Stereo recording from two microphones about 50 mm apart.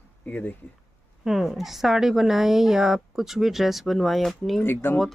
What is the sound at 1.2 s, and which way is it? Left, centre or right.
A woman's voice, centre.